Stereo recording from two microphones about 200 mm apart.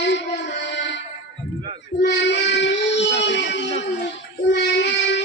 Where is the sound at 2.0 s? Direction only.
60° left (ahead or behind).